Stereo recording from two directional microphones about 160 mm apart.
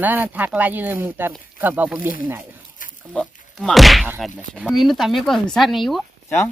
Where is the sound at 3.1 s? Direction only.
5° left (ahead or behind).